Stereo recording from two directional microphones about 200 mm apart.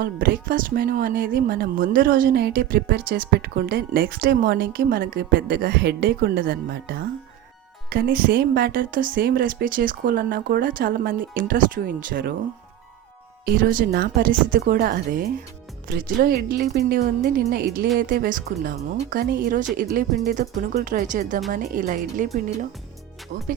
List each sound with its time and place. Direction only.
0.0 s a woman's voice: 45° right (ahead or behind)
13.6 s a woman's voice: 45° right (ahead or behind)
23.3 s a woman's voice: 40° right (ahead or behind)